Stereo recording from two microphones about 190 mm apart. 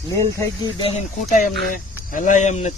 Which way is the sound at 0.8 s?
30° left (ahead or behind).